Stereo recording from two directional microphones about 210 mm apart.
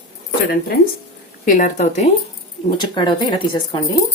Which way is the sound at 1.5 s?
40° left (ahead or behind).